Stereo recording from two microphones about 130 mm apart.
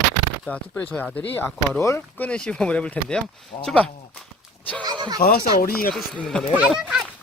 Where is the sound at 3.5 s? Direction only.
35° left (ahead or behind).